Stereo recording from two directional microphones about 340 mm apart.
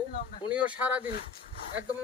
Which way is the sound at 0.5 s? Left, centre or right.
Centre.